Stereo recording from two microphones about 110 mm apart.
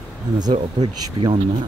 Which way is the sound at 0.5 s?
55° right (ahead or behind).